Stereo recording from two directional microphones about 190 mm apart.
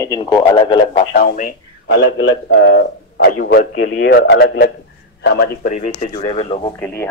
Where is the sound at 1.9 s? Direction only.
70° left (ahead or behind).